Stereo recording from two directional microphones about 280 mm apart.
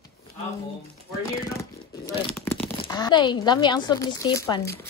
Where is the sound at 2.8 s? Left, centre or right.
Centre.